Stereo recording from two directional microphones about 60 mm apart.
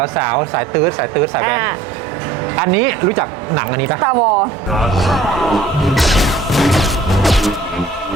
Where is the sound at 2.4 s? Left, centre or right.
Right.